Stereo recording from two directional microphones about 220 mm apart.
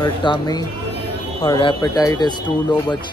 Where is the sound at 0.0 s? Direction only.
20° left (ahead or behind).